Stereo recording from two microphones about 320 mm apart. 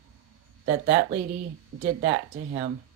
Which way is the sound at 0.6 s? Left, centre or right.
Right.